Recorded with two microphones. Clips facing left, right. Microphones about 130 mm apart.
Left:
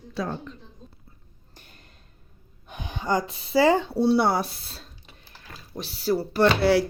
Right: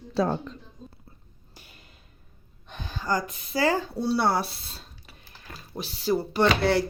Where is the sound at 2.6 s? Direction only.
15° left (ahead or behind).